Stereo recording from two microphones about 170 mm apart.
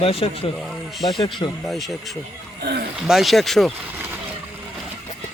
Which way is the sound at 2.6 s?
70° right (ahead or behind).